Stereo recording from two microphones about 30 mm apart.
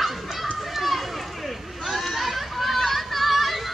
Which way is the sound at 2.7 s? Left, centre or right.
Centre.